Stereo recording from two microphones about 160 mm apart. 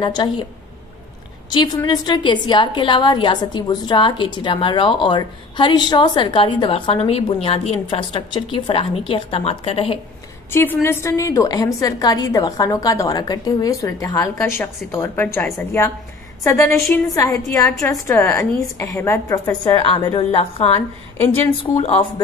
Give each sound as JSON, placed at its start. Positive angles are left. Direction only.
{"t": 0.0, "sound": "a woman's voice", "side_deg": 30}
{"t": 1.9, "sound": "a woman's voice", "side_deg": 30}
{"t": 10.5, "sound": "a woman's voice", "side_deg": 15}
{"t": 16.4, "sound": "a woman's voice", "side_deg": 20}
{"t": 19.6, "sound": "a woman's voice", "side_deg": 30}